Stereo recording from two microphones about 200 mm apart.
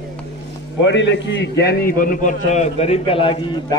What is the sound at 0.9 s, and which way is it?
A man's voice, 65° left (ahead or behind).